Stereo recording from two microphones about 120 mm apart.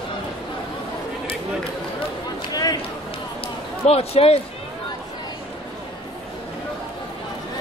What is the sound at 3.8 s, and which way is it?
Speech, 55° left (ahead or behind).